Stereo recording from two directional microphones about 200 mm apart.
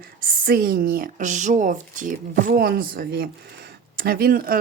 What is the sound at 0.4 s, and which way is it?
Speech, 45° right (ahead or behind).